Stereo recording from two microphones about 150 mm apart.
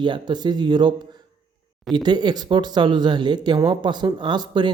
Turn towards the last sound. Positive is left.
turn(degrees=-30)  # may be behind; listen again after turning